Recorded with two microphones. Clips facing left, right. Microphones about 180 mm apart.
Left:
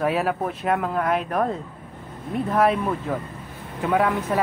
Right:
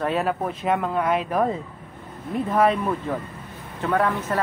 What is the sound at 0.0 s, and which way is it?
Speech, 5° left (ahead or behind).